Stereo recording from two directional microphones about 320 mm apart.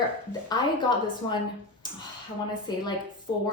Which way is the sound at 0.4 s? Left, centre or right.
Centre.